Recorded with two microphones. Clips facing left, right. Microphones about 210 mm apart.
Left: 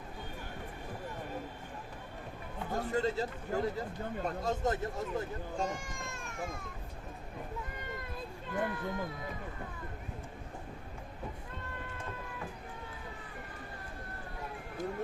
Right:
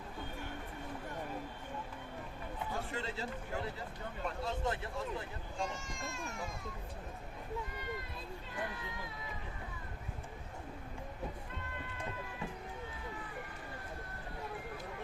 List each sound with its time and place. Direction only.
2.7 s speech: 40° left (ahead or behind)
8.4 s speech: 55° left (ahead or behind)